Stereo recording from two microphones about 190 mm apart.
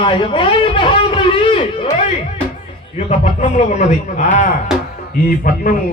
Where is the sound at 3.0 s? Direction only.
35° left (ahead or behind).